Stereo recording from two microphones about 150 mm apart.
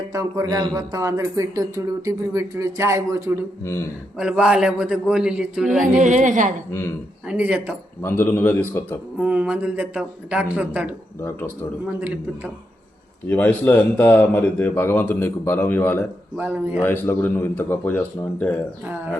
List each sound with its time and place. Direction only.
0.1 s speech: 20° right (ahead or behind)
3.6 s a man's voice: 20° left (ahead or behind)
4.2 s a man's voice: 5° right (ahead or behind)
6.0 s a woman's voice: 55° right (ahead or behind)
6.7 s speech: 15° left (ahead or behind)
7.3 s speech: 10° right (ahead or behind)
8.0 s speech: 15° left (ahead or behind)
9.1 s speech: 10° right (ahead or behind)
11.2 s speech: 15° left (ahead or behind)
11.9 s speech: 10° right (ahead or behind)
13.2 s speech: 10° left (ahead or behind)
16.4 s speech: 10° right (ahead or behind)
16.8 s speech: 15° left (ahead or behind)